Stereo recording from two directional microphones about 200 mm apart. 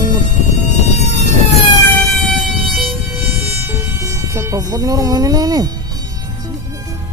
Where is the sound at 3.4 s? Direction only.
10° right (ahead or behind).